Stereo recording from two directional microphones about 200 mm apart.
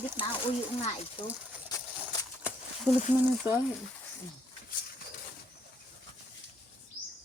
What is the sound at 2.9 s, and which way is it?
Speech, 10° right (ahead or behind).